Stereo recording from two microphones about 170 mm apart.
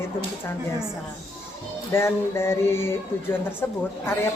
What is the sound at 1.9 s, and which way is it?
Speech, 15° left (ahead or behind).